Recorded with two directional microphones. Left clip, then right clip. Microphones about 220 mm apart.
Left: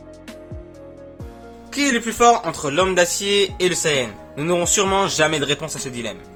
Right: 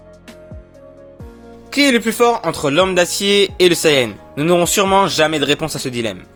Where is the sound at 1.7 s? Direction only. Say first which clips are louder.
Right 6 dB; 35° right (ahead or behind).